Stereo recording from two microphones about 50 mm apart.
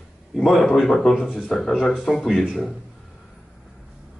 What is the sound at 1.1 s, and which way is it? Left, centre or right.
Speech, centre.